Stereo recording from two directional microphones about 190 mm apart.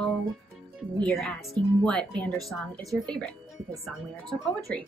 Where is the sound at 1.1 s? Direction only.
Centre (ahead or behind).